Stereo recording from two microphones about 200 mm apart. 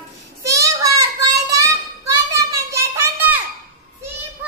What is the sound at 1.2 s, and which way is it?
Child singing, 15° right (ahead or behind).